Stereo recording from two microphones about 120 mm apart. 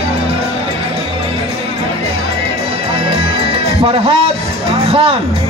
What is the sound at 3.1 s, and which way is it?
Music, 50° right (ahead or behind).